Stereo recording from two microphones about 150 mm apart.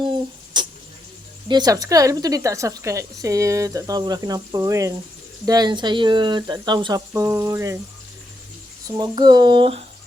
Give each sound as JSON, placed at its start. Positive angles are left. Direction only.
{"t": 0.5, "sound": "a sound", "side_deg": -30}
{"t": 1.5, "sound": "a woman's voice", "side_deg": -25}
{"t": 9.0, "sound": "speech", "side_deg": -30}